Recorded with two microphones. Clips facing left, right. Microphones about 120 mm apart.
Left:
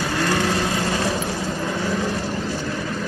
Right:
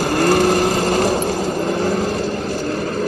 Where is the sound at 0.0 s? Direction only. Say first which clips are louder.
Right 7 dB; 45° right (ahead or behind).